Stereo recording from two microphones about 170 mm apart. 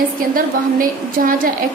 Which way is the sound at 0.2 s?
55° right (ahead or behind).